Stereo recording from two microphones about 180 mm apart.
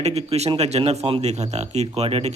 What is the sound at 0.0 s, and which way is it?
A man's voice, 35° right (ahead or behind).